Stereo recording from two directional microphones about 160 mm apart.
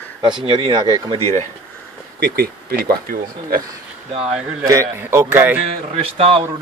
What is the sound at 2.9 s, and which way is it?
Speech, 65° right (ahead or behind).